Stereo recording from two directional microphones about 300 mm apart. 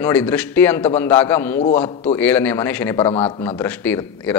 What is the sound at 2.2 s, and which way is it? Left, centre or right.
Speech, centre.